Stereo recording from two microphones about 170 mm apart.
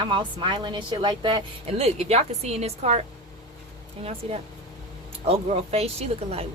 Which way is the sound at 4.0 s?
35° right (ahead or behind).